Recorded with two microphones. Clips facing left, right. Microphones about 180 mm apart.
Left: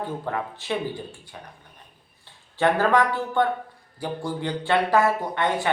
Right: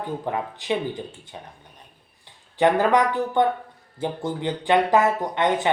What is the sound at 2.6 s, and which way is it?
Speech, 15° right (ahead or behind).